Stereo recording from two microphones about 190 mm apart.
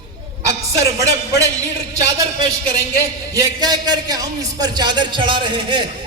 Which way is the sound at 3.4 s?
20° right (ahead or behind).